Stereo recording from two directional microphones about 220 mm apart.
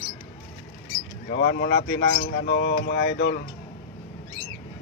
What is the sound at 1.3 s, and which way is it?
Speech, 50° left (ahead or behind).